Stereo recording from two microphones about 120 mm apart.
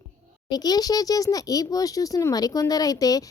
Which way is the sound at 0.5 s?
35° left (ahead or behind).